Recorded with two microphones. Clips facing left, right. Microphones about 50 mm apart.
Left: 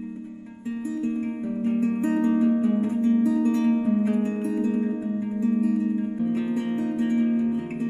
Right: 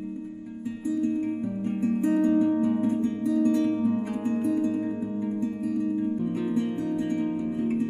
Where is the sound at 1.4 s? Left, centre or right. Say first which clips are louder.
Left 3 dB; left.